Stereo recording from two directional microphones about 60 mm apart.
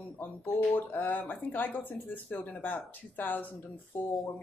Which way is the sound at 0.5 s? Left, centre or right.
Left.